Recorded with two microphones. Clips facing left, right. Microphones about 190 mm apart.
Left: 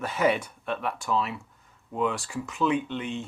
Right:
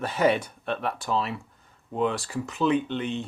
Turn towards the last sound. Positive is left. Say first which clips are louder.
# right 2 dB
turn(degrees=-35)  # may be behind; listen again after turning